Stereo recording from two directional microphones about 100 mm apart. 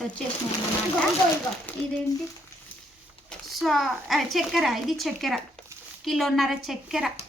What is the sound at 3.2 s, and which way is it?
Speech, centre (ahead or behind).